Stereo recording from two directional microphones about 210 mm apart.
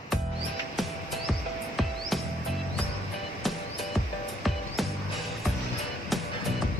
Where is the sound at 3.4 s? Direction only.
Centre (ahead or behind).